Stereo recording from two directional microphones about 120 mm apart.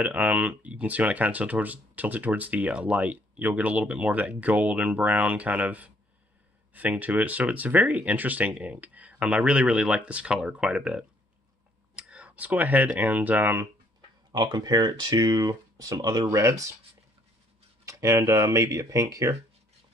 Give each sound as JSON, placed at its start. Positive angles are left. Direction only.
{"t": 0.0, "sound": "speech", "side_deg": -15}
{"t": 14.3, "sound": "speech", "side_deg": -35}
{"t": 17.8, "sound": "speech", "side_deg": -25}